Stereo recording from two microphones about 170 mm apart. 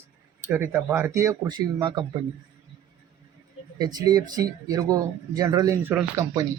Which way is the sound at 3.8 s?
25° right (ahead or behind).